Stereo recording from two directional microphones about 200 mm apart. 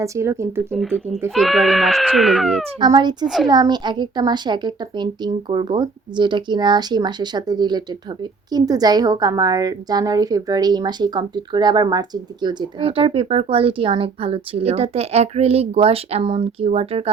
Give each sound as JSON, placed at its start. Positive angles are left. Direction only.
{"t": 0.0, "sound": "speech", "side_deg": -15}
{"t": 0.7, "sound": "speech", "side_deg": 5}
{"t": 2.8, "sound": "a woman's voice", "side_deg": -20}
{"t": 3.2, "sound": "speech", "side_deg": 0}
{"t": 3.5, "sound": "a woman's voice", "side_deg": -20}